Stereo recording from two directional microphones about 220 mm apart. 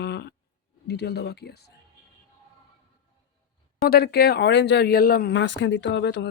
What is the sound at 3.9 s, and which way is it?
Speech, 45° left (ahead or behind).